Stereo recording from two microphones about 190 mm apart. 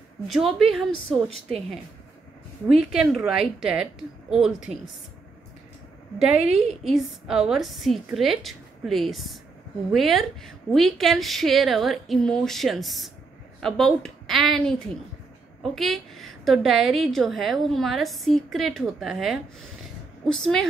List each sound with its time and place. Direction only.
0.3 s a woman's voice: centre (ahead or behind)
2.7 s a woman's voice: 5° right (ahead or behind)
6.1 s a woman's voice: 5° right (ahead or behind)